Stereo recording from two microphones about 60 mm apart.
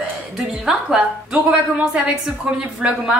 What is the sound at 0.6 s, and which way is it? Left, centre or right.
Speech, centre.